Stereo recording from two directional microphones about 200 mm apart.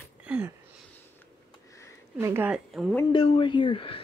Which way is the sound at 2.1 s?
10° right (ahead or behind).